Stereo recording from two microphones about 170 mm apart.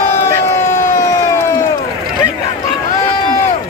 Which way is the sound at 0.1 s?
15° left (ahead or behind).